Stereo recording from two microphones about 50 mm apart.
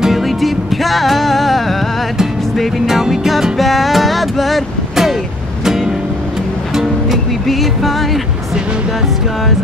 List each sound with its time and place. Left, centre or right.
0.0 s music: centre
2.9 s music: centre
6.7 s music: centre